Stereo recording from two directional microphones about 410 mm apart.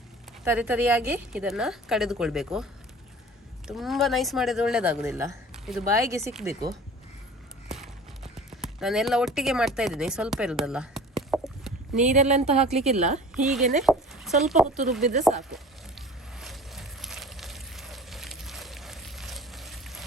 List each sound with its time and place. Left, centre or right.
0.4 s speech: centre
3.7 s speech: centre
7.7 s clip-clop: centre
12.0 s a woman's voice: centre
13.3 s speech: centre
13.8 s a sound: centre
14.8 s speech: centre
15.5 s a sound: centre